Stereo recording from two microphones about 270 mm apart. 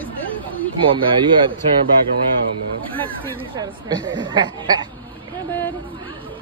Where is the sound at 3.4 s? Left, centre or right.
Centre.